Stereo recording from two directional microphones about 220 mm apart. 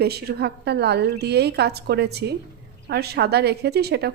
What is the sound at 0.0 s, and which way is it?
A woman's voice, 45° right (ahead or behind).